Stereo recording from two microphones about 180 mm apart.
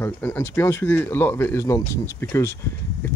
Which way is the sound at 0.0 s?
10° left (ahead or behind).